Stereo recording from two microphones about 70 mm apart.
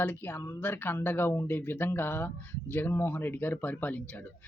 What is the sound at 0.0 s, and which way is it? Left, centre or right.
Speech, left.